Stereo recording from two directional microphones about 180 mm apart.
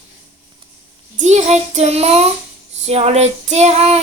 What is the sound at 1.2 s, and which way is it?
Child singing, 40° right (ahead or behind).